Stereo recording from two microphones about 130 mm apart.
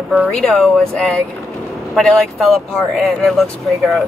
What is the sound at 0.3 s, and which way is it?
Speech, 5° left (ahead or behind).